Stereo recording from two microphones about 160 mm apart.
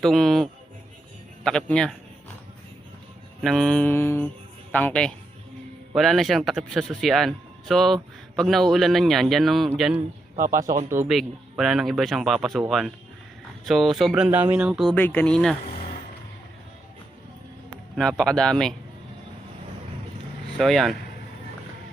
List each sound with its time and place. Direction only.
0.0 s speech: centre (ahead or behind)
1.5 s speech: 5° left (ahead or behind)
3.4 s mantra: centre (ahead or behind)
5.9 s speech: centre (ahead or behind)
10.3 s speech: 20° right (ahead or behind)
11.1 s speech: centre (ahead or behind)
14.1 s speech: 15° right (ahead or behind)
14.8 s mantra: 10° left (ahead or behind)
15.6 s vehicle: 40° left (ahead or behind)
17.9 s speech: centre (ahead or behind)
20.6 s speech: centre (ahead or behind)